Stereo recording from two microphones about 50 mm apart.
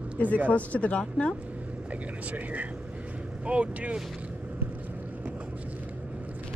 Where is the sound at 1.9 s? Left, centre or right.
Right.